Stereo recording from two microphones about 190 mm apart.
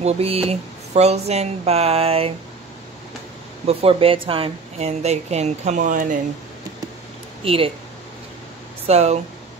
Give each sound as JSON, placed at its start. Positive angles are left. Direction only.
{"t": 0.0, "sound": "speech", "side_deg": -30}
{"t": 3.6, "sound": "speech", "side_deg": -30}
{"t": 7.4, "sound": "speech", "side_deg": -30}
{"t": 8.8, "sound": "speech", "side_deg": -35}